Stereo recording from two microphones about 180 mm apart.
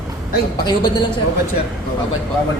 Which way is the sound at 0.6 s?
25° left (ahead or behind).